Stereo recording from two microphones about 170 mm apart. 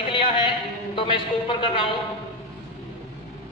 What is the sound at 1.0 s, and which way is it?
Speech, 30° left (ahead or behind).